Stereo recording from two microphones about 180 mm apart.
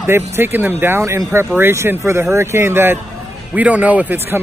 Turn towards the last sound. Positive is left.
turn(degrees=-10)  # may be behind; listen again after turning